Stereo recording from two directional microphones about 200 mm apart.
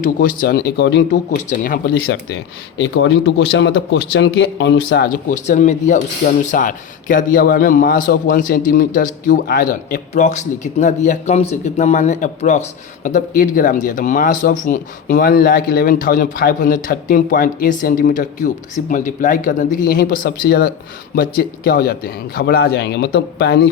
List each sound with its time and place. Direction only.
0.2 s speech: 45° left (ahead or behind)
2.7 s a man's voice: 65° left (ahead or behind)
5.3 s a man's voice: 35° left (ahead or behind); by 23.6 s 55° left (ahead or behind)